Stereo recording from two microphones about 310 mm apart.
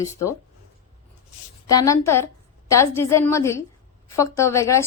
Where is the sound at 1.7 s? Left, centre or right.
Centre.